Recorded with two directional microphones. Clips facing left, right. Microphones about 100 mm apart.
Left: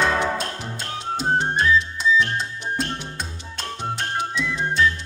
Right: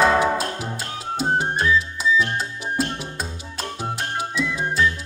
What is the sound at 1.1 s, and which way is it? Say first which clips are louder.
Music: even; 5° right (ahead or behind).